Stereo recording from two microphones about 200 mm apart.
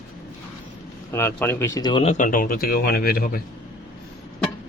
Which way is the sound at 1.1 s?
10° left (ahead or behind).